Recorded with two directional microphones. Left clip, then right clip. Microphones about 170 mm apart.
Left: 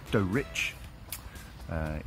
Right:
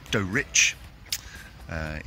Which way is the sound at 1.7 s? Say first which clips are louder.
Right 3 dB; 5° right (ahead or behind).